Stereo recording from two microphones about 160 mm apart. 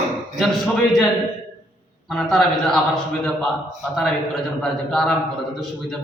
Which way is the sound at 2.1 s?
Centre (ahead or behind).